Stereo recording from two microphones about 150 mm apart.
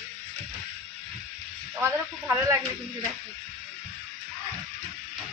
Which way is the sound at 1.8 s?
20° right (ahead or behind).